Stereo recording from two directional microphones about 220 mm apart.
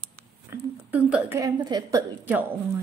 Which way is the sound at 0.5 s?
5° right (ahead or behind).